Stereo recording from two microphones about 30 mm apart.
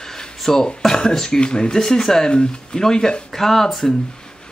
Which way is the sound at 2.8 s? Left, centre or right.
Centre.